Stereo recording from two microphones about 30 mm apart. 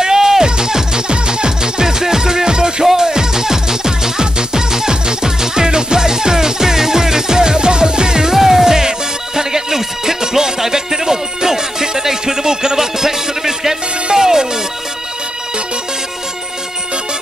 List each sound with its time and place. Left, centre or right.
0.0 s music: centre
8.4 s music: centre